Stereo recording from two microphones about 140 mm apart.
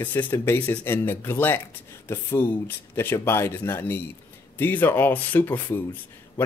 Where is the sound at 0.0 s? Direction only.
15° left (ahead or behind).